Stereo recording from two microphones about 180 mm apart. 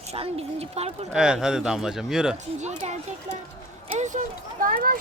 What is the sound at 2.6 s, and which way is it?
A woman's voice, 40° right (ahead or behind).